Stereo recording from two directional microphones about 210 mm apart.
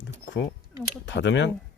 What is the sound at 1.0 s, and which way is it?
Speech, 55° left (ahead or behind).